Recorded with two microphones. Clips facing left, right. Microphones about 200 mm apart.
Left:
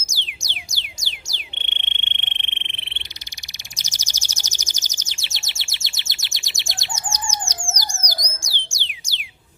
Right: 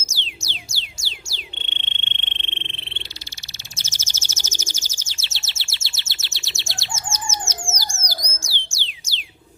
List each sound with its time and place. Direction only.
0.0 s music: 15° left (ahead or behind)
1.5 s frog: 15° left (ahead or behind)
3.8 s bird: 15° left (ahead or behind)
8.0 s a sound: 15° left (ahead or behind)